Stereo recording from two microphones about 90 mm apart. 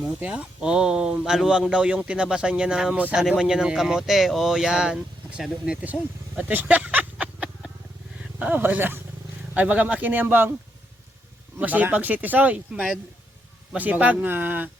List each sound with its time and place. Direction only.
0.0 s speech: 10° right (ahead or behind)
3.2 s a man's voice: 5° right (ahead or behind); by 10.5 s 20° right (ahead or behind)
11.5 s a man's voice: 20° right (ahead or behind)